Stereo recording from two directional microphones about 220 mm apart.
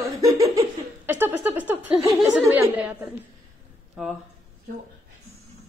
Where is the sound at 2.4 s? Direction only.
10° right (ahead or behind).